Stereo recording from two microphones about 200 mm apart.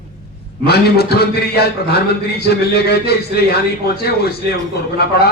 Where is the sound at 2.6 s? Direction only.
50° left (ahead or behind).